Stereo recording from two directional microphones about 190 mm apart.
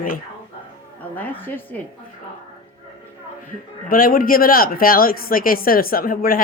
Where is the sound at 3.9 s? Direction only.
50° left (ahead or behind).